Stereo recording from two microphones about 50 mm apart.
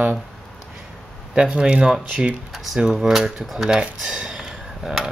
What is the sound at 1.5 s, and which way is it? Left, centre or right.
Speech, right.